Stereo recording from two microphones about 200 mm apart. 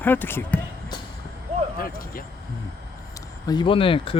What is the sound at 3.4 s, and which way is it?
Speech, 25° left (ahead or behind).